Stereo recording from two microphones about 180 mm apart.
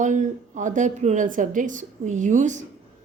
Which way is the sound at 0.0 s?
45° right (ahead or behind).